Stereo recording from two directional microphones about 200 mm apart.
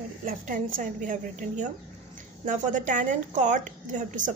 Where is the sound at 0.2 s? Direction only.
40° right (ahead or behind).